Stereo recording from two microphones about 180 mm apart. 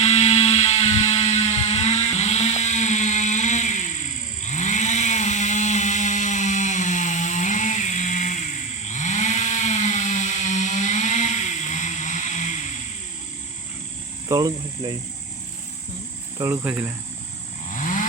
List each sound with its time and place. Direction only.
0.0 s mechanisms: 35° left (ahead or behind)
4.4 s chainsaw: 40° left (ahead or behind)
8.9 s a sound: 40° left (ahead or behind)
14.3 s speech: 20° right (ahead or behind)
16.4 s cricket: 10° right (ahead or behind)
17.7 s vehicle: 45° left (ahead or behind)